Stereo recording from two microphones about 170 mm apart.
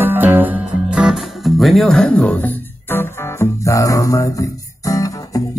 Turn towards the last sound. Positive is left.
turn(degrees=20)  # may be behind; listen again after turning